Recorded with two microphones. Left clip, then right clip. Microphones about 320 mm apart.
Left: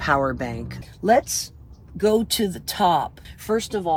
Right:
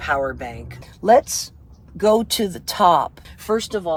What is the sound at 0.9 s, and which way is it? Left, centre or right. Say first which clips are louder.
Speech: right 4 dB; centre.